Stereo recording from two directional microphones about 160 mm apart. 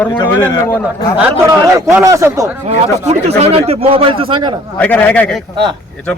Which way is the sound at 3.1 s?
40° right (ahead or behind).